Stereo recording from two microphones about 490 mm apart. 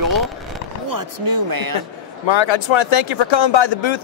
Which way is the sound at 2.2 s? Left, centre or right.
Left.